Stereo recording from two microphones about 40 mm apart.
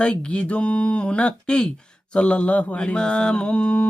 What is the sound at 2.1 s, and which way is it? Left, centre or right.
Speech, left.